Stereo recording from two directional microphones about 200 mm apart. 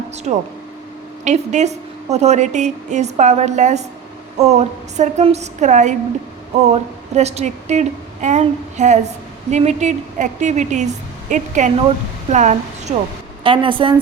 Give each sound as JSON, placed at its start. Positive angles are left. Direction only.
{"t": 0.3, "sound": "a woman's voice", "side_deg": -35}